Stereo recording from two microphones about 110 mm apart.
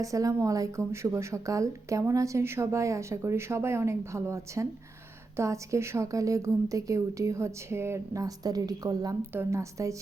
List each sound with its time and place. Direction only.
0.0 s speech: 30° right (ahead or behind)
9.3 s speech: 25° right (ahead or behind)